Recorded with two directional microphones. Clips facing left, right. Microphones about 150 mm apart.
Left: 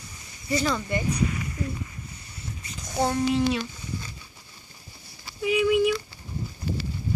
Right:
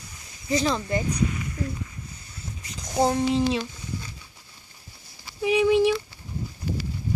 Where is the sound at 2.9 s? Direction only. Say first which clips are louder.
Right 2 dB; 30° right (ahead or behind).